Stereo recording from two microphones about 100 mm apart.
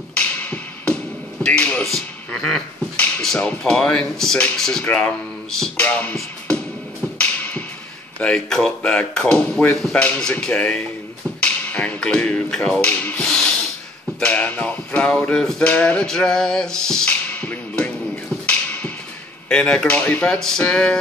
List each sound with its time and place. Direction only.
0.1 s music: 15° left (ahead or behind)
1.4 s speech: 10° left (ahead or behind)
6.1 s music: 10° left (ahead or behind)
8.2 s speech: 5° left (ahead or behind)
14.2 s a sound: 15° left (ahead or behind)
19.5 s speech: 10° left (ahead or behind)